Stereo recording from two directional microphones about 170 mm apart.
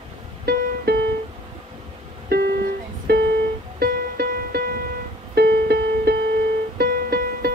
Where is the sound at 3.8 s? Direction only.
65° right (ahead or behind).